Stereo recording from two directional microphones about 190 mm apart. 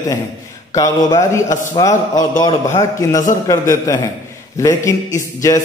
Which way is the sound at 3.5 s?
15° left (ahead or behind).